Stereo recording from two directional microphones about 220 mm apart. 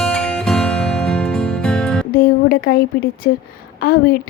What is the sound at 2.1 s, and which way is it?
Music, 40° left (ahead or behind).